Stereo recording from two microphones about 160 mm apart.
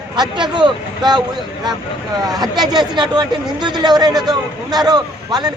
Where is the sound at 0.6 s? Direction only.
25° right (ahead or behind).